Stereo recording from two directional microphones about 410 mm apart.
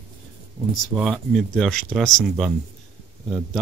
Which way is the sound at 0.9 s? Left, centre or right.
Centre.